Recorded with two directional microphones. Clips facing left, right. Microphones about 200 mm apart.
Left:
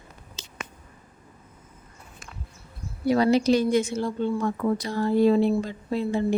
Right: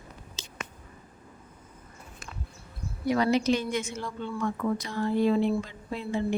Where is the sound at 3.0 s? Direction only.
35° left (ahead or behind).